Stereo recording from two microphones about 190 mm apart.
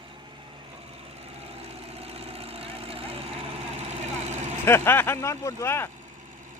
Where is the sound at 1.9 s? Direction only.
30° right (ahead or behind).